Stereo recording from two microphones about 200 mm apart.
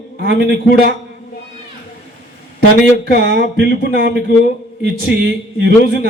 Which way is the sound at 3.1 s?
55° right (ahead or behind).